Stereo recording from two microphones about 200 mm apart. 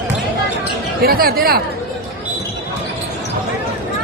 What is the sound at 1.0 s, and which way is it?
Speech, 50° right (ahead or behind).